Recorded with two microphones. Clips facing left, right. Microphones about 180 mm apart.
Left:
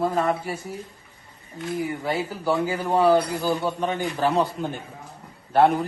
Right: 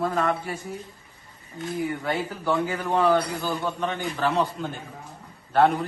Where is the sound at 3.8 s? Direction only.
40° left (ahead or behind).